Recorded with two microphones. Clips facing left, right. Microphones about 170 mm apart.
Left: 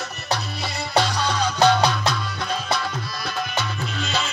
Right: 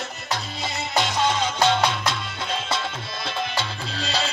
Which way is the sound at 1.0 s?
20° right (ahead or behind).